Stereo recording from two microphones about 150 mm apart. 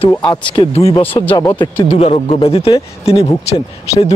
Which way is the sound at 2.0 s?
45° left (ahead or behind).